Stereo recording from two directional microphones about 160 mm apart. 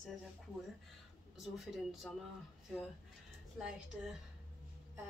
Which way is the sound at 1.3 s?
Centre (ahead or behind).